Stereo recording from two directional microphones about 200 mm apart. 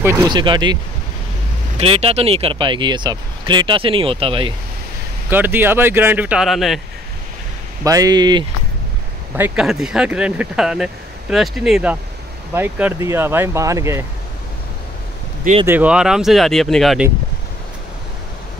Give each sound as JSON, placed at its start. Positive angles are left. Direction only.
{"t": 0.0, "sound": "speech", "side_deg": -15}
{"t": 1.8, "sound": "speech", "side_deg": -30}
{"t": 5.3, "sound": "speech", "side_deg": -10}
{"t": 7.8, "sound": "speech", "side_deg": -15}
{"t": 9.4, "sound": "speech", "side_deg": 0}
{"t": 15.6, "sound": "speech", "side_deg": -10}